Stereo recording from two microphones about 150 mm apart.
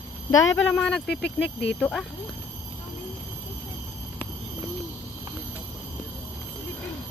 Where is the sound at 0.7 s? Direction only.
5° left (ahead or behind).